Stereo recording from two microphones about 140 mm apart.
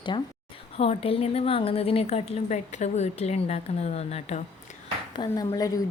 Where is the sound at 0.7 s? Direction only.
45° left (ahead or behind).